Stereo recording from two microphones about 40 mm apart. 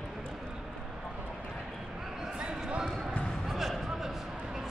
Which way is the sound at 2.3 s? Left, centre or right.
Right.